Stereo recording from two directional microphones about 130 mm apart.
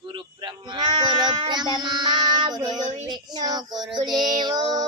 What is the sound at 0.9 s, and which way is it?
Child singing, 35° right (ahead or behind).